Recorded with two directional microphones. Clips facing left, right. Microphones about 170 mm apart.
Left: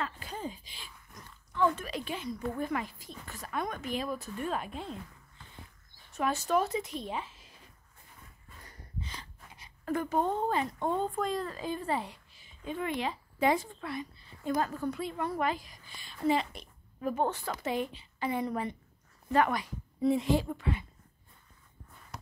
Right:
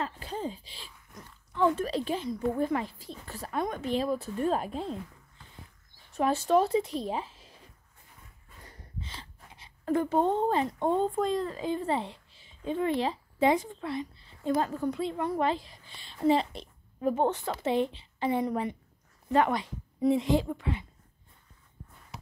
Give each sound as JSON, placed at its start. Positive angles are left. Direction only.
{"t": 0.0, "sound": "speech", "side_deg": -30}
{"t": 6.1, "sound": "speech", "side_deg": -30}
{"t": 8.5, "sound": "a woman's voice", "side_deg": -25}